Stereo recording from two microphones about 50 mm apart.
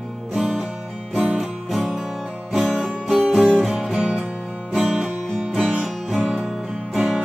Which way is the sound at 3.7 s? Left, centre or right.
Centre.